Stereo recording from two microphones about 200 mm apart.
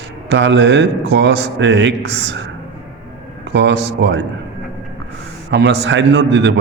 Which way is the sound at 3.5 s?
60° right (ahead or behind).